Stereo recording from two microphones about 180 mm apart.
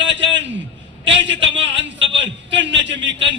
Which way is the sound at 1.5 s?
90° right.